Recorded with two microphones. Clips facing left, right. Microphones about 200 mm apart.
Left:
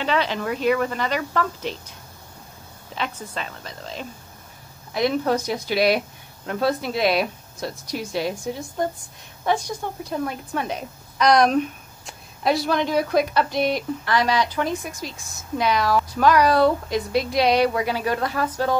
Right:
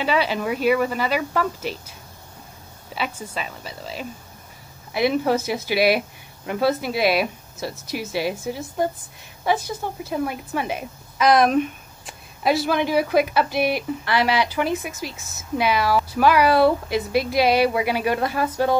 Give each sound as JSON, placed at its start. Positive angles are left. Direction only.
{"t": 0.0, "sound": "speech", "side_deg": -10}